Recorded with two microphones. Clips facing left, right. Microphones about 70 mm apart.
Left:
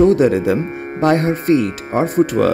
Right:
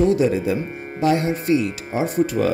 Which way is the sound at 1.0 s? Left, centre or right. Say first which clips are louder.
Left 4 dB; left.